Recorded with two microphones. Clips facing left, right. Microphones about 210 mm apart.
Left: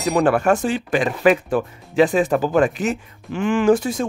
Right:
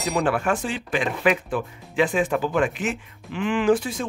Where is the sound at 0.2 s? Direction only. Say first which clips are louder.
Left 7 dB; 45° left (ahead or behind).